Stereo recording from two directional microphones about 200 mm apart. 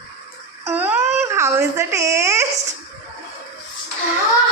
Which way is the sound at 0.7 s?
10° right (ahead or behind).